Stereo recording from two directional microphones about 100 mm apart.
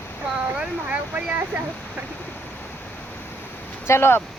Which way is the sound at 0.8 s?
15° right (ahead or behind).